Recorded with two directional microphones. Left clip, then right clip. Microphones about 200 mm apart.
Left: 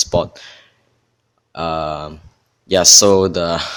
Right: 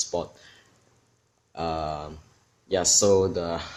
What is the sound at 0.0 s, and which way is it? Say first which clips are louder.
Speech: left 12 dB; 40° left (ahead or behind).